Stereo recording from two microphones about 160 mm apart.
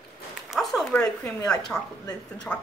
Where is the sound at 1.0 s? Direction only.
20° left (ahead or behind).